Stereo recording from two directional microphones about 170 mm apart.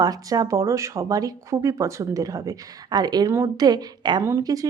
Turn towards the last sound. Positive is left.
turn(degrees=-20)  # may be behind; listen again after turning